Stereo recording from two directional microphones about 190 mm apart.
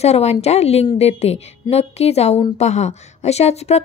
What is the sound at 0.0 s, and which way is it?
A woman's voice, 35° left (ahead or behind).